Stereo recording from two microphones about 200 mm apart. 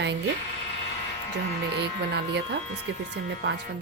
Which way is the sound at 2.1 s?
60° right (ahead or behind).